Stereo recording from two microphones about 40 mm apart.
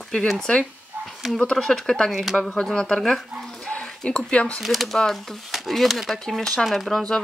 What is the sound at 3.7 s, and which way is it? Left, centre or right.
Speech, left.